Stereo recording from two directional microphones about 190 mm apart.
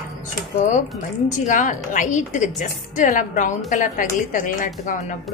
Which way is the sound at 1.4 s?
40° left (ahead or behind).